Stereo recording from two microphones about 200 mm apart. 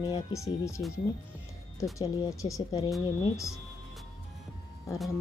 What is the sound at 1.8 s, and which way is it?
Speech, 15° left (ahead or behind).